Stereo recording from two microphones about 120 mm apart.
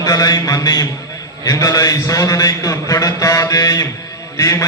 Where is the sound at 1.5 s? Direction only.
30° left (ahead or behind).